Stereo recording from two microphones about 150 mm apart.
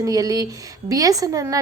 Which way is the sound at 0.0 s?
25° right (ahead or behind).